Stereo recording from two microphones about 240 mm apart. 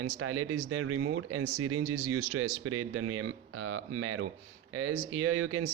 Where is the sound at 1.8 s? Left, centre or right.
Right.